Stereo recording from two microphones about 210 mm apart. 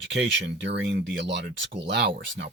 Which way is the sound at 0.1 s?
55° right (ahead or behind).